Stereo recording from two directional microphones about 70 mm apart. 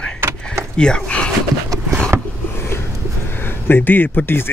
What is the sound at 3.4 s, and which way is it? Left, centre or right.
Speech, left.